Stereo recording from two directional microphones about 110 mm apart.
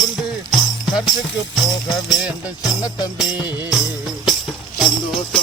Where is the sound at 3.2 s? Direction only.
5° right (ahead or behind).